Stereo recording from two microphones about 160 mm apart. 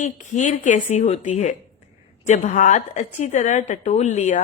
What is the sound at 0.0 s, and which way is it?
A woman's voice, 50° left (ahead or behind).